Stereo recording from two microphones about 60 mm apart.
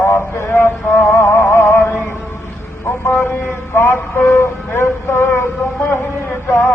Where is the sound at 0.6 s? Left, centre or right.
Left.